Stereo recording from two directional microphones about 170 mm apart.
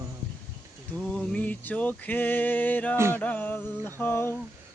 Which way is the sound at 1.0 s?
5° left (ahead or behind).